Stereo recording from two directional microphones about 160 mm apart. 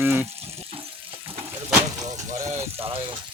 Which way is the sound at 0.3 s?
40° right (ahead or behind).